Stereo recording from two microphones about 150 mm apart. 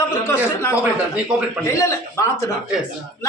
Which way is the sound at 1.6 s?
20° left (ahead or behind).